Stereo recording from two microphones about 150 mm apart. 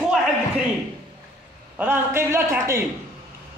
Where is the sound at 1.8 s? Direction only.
15° right (ahead or behind).